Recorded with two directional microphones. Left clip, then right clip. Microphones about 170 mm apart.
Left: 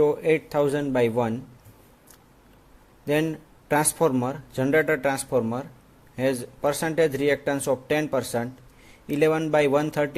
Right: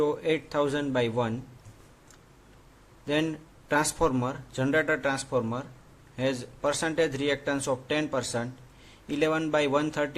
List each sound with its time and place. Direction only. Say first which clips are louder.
0.0 s speech: left 6 dB; 25° left (ahead or behind)
3.1 s speech: left 4 dB; 25° left (ahead or behind)